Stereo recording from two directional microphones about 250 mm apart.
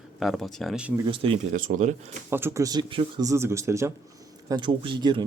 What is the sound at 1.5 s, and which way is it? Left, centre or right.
Speech, right.